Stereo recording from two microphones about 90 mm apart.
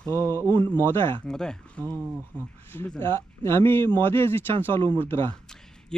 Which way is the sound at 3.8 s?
60° right (ahead or behind).